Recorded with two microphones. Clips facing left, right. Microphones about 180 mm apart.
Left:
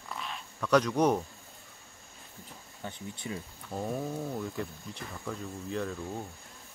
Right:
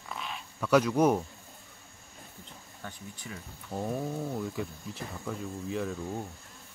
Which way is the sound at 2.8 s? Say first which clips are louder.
Left 4 dB; 25° left (ahead or behind).